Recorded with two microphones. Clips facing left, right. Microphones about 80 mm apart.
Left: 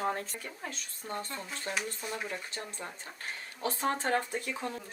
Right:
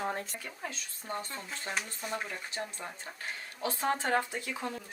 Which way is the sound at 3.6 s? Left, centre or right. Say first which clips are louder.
Left 1 dB; left.